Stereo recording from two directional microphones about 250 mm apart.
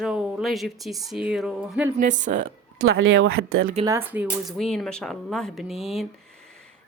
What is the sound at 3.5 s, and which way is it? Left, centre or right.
Speech, right.